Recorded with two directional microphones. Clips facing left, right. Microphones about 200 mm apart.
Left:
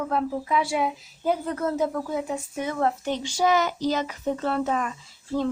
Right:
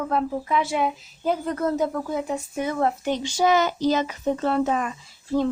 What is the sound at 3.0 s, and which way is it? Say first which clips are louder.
Speech: right 2 dB; 20° right (ahead or behind).